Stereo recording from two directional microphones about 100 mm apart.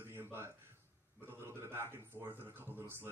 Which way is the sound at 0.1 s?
25° right (ahead or behind).